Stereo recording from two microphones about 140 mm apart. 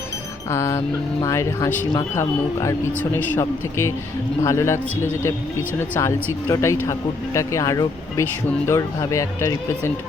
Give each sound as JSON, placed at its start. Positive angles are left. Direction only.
{"t": 0.5, "sound": "speech", "side_deg": 20}